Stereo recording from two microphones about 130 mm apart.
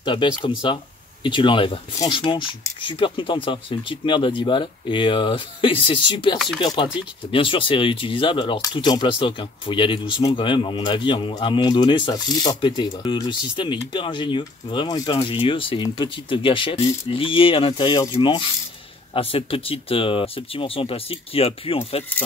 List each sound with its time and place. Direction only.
0.0 s speech: 35° left (ahead or behind)
6.3 s speech: centre (ahead or behind)
6.6 s speech: 35° left (ahead or behind)